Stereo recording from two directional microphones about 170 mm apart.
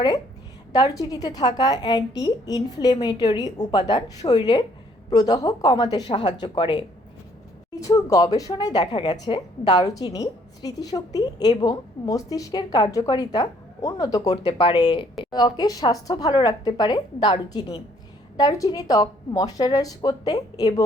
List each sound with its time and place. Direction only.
0.7 s a woman's voice: 20° left (ahead or behind)